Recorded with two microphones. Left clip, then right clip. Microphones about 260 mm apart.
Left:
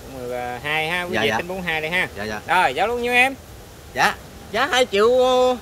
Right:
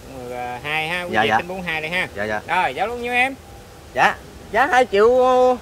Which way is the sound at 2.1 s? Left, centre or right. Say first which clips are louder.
Right 5 dB; centre.